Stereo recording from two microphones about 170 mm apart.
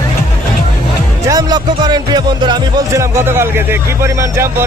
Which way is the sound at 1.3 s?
20° right (ahead or behind).